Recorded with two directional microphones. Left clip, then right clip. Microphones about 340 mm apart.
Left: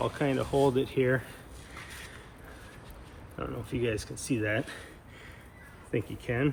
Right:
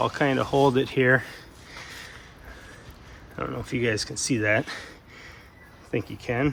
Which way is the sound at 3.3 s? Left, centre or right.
Centre.